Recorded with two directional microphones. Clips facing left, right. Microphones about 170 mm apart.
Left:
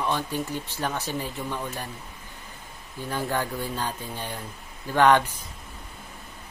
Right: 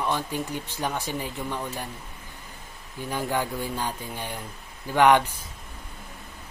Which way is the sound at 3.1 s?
15° right (ahead or behind).